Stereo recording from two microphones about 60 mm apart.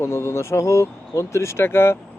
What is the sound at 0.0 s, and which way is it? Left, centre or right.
Speech, left.